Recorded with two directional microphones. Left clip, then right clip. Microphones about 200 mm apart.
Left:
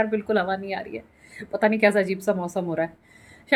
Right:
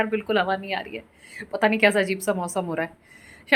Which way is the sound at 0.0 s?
10° left (ahead or behind).